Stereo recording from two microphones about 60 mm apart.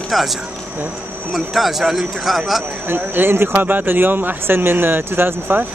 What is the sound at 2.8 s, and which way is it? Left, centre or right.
Speech, right.